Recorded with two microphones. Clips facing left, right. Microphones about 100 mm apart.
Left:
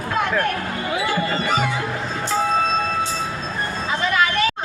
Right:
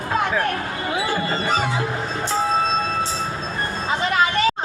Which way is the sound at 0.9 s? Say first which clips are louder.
Left 1 dB; 30° right (ahead or behind).